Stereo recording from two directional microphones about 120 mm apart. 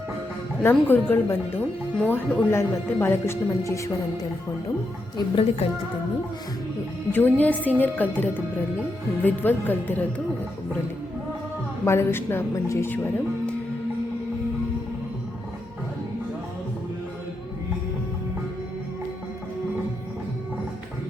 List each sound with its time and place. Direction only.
0.6 s speech: 15° left (ahead or behind)
5.1 s a woman's voice: 50° left (ahead or behind)
7.1 s speech: 15° left (ahead or behind)
11.9 s speech: 20° left (ahead or behind)